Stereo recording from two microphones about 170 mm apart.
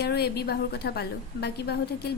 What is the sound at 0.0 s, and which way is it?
Speech, 70° left (ahead or behind).